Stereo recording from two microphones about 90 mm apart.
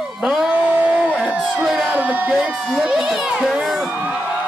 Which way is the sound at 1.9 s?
15° right (ahead or behind).